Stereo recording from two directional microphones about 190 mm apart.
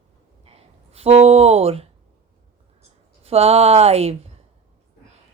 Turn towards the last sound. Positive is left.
turn(degrees=-35)  # may be behind; listen again after turning